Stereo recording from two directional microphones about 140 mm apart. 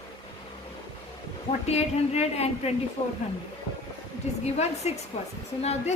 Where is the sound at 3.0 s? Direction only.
30° left (ahead or behind).